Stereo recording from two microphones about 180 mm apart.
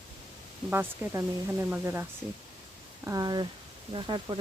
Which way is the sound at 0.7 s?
15° right (ahead or behind).